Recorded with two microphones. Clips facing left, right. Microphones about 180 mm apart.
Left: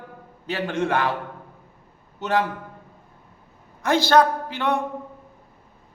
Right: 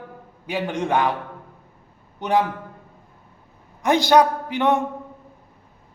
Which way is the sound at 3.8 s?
15° right (ahead or behind).